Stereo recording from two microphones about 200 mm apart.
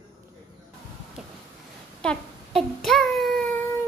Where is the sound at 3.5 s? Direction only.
15° left (ahead or behind).